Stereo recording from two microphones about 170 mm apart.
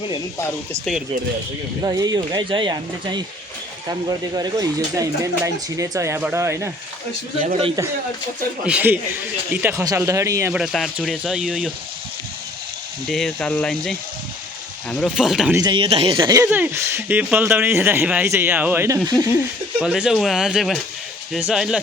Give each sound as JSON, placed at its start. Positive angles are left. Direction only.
{"t": 1.8, "sound": "speech", "side_deg": -20}
{"t": 4.4, "sound": "speech", "side_deg": -25}
{"t": 7.4, "sound": "a man's voice", "side_deg": -40}
{"t": 8.6, "sound": "speech", "side_deg": -10}
{"t": 10.5, "sound": "speech", "side_deg": 0}
{"t": 13.1, "sound": "speech", "side_deg": 0}
{"t": 15.5, "sound": "speech", "side_deg": -25}
{"t": 19.8, "sound": "speech", "side_deg": -5}